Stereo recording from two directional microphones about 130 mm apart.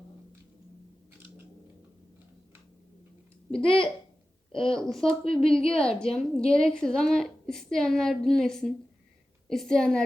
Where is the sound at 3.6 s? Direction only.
45° left (ahead or behind).